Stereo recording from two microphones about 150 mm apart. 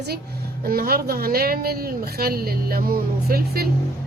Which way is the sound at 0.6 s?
80° right.